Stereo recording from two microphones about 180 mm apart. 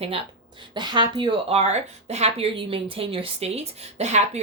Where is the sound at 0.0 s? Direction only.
30° right (ahead or behind).